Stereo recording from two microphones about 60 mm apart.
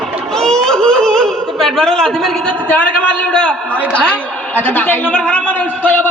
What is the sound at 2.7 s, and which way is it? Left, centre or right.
Speech, left.